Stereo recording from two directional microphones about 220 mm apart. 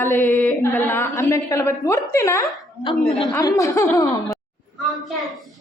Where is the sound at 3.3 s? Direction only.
15° left (ahead or behind).